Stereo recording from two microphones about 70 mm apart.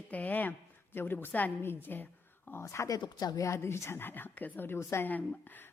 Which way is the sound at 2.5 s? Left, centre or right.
Left.